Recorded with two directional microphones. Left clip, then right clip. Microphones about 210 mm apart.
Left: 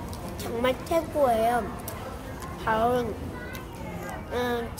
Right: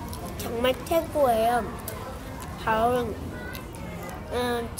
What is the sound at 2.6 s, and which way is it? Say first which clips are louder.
Speech: right 1 dB; centre (ahead or behind).